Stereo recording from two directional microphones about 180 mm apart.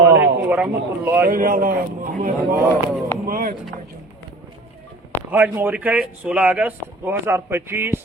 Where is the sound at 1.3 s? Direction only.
50° right (ahead or behind).